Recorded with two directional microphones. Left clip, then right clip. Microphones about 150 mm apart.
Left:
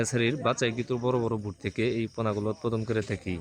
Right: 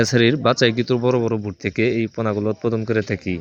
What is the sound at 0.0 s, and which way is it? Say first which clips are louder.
Speech: right 10 dB; 35° right (ahead or behind).